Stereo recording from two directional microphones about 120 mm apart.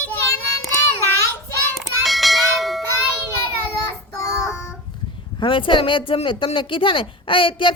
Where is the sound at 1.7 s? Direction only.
Centre (ahead or behind).